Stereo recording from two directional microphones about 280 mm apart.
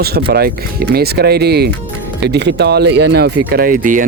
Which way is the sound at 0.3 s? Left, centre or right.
Right.